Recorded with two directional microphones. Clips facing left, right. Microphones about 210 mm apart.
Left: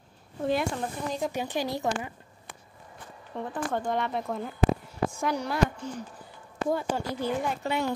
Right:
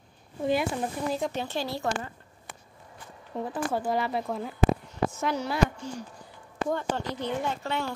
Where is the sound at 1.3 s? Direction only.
15° left (ahead or behind).